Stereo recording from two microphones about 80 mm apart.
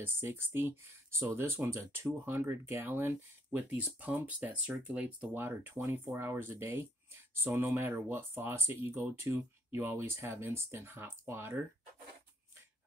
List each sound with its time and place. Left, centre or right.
0.0 s speech: right